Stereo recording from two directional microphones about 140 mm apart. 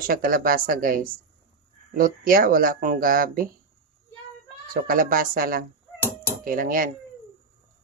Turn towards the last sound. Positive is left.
turn(degrees=-80)